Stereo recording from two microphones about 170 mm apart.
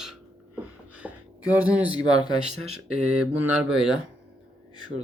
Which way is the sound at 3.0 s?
5° right (ahead or behind).